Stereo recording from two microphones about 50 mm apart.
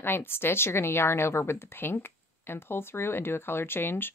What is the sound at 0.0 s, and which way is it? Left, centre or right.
Speech, left.